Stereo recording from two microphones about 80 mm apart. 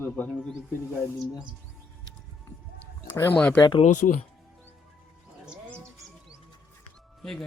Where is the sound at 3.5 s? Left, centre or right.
Left.